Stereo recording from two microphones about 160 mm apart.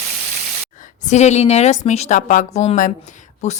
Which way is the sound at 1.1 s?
45° left (ahead or behind).